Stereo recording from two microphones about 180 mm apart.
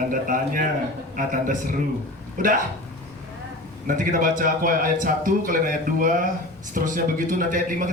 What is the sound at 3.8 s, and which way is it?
A man's voice, 50° right (ahead or behind).